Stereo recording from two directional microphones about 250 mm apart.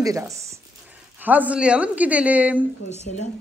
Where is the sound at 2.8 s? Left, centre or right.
Left.